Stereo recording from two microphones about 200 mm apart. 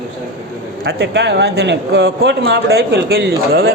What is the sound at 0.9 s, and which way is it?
Speech, 60° right (ahead or behind).